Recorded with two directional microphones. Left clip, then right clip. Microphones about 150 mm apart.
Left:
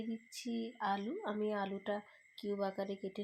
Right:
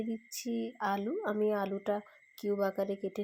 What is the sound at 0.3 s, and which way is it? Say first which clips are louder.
Speech: right 5 dB; 25° right (ahead or behind).